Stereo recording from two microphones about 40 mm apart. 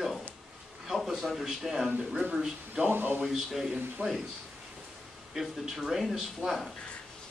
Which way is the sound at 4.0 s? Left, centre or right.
Right.